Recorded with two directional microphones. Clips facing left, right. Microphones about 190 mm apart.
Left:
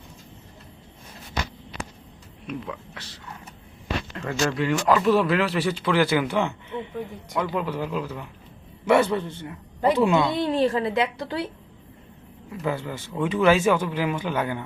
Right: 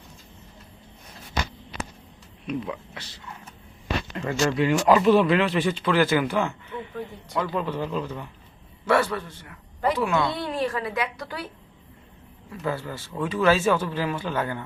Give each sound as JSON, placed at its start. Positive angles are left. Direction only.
{"t": 2.5, "sound": "speech", "side_deg": -10}
{"t": 4.1, "sound": "speech", "side_deg": -10}
{"t": 5.0, "sound": "speech", "side_deg": 0}
{"t": 8.9, "sound": "a woman's voice", "side_deg": 20}
{"t": 12.5, "sound": "speech", "side_deg": 15}